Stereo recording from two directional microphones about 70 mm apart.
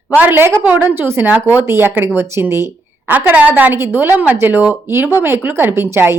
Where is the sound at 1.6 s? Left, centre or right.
Right.